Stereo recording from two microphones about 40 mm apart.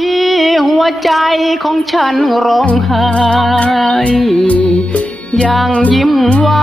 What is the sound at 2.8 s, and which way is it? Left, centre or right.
Music, centre.